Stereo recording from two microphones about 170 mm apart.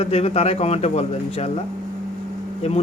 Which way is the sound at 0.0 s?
35° left (ahead or behind).